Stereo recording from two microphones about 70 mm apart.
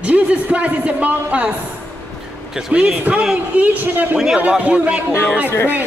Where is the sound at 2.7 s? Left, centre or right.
Centre.